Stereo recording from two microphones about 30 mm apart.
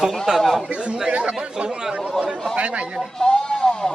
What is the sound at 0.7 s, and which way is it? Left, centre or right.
Speech, right.